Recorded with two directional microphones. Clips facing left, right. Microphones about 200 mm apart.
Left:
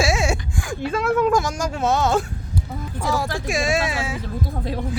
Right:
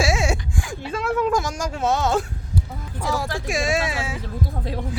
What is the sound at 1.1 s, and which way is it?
Speech, 55° left (ahead or behind).